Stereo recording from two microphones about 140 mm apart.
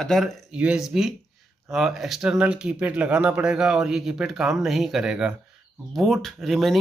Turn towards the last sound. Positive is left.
turn(degrees=0)  # may be behind; listen again after turning